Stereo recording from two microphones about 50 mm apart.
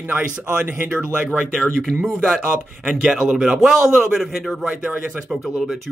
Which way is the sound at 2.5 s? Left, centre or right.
Centre.